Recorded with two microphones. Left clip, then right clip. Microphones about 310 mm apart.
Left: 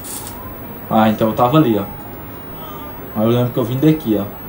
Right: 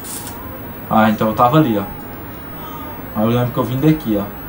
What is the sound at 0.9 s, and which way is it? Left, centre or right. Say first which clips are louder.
Speech: right 1 dB; right.